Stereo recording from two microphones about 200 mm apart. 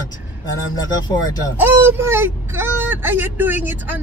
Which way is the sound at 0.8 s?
20° left (ahead or behind).